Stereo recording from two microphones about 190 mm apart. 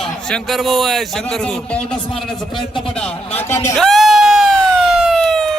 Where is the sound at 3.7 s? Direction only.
Centre (ahead or behind).